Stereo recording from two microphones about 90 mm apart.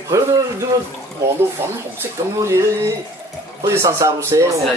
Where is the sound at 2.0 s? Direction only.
30° right (ahead or behind).